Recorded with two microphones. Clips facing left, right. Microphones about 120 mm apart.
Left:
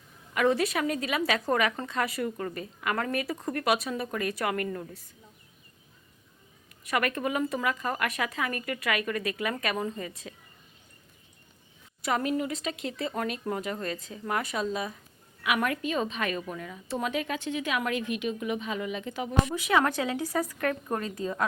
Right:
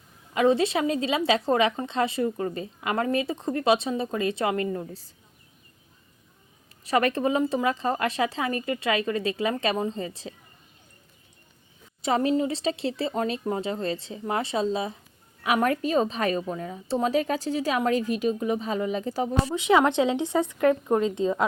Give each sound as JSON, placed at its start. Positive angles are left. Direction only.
{"t": 0.3, "sound": "a woman's voice", "side_deg": -25}
{"t": 6.8, "sound": "a woman's voice", "side_deg": -30}
{"t": 12.0, "sound": "a woman's voice", "side_deg": -25}